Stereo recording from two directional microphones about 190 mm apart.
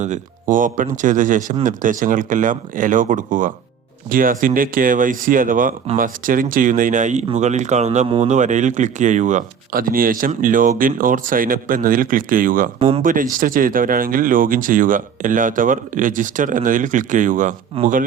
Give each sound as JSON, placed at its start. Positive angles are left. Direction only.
{"t": 0.0, "sound": "speech", "side_deg": -40}